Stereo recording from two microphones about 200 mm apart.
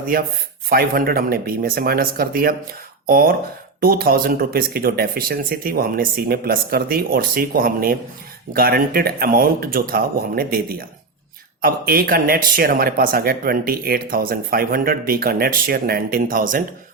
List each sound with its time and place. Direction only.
0.1 s speech: 45° right (ahead or behind)